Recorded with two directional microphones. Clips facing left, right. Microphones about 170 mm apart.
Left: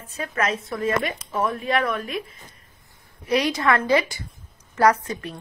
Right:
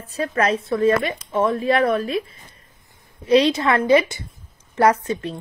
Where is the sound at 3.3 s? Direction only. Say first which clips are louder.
Right 5 dB; 25° right (ahead or behind).